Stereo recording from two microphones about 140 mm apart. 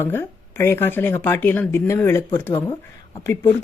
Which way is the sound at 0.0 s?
15° left (ahead or behind).